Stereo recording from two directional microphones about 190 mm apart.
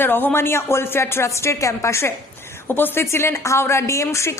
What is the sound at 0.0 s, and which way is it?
Speech, 10° left (ahead or behind).